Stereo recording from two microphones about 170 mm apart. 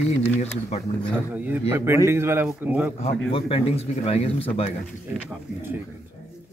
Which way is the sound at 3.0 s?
35° left (ahead or behind).